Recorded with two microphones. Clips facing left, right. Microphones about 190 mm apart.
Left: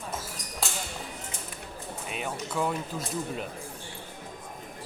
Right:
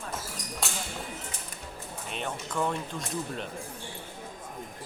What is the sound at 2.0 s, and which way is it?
Speech, 5° left (ahead or behind).